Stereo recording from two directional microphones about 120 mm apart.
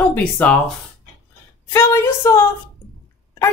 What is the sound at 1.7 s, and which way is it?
Speech, 20° left (ahead or behind).